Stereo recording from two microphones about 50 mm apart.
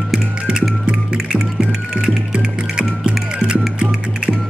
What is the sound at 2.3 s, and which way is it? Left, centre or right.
Music, right.